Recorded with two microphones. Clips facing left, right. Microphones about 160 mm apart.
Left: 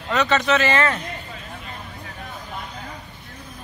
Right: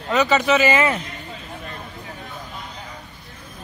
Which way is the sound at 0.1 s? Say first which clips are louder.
Right 2 dB; 5° right (ahead or behind).